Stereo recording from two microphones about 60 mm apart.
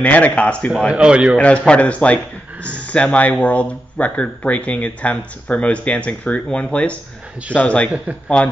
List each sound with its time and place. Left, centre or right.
0.0 s speech: left
0.8 s a man's voice: centre
1.7 s a man's voice: left